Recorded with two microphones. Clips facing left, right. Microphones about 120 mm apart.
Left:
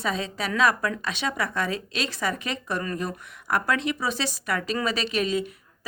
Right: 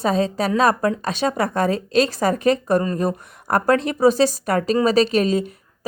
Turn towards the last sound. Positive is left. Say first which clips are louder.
# right 5 dB
turn(degrees=-40)  # may be behind; listen again after turning